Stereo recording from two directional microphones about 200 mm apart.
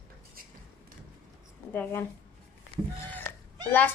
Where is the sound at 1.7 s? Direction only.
10° left (ahead or behind).